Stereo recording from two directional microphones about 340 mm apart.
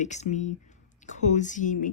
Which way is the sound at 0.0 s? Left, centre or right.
Left.